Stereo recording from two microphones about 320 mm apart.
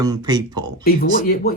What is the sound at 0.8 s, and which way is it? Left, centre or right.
Speech, left.